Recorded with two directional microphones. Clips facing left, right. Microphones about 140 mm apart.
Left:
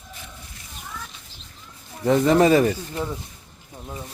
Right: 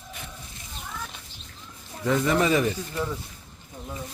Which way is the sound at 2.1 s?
35° left (ahead or behind).